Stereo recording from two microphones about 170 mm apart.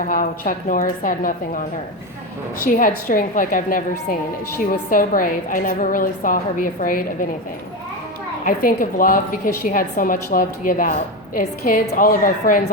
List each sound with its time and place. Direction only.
0.0 s a woman's voice: 55° left (ahead or behind)
2.7 s a woman's voice: 55° left (ahead or behind)
8.4 s a woman's voice: 55° left (ahead or behind)